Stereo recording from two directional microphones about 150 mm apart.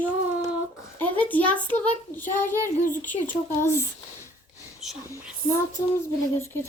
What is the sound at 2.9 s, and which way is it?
Speech, 10° left (ahead or behind).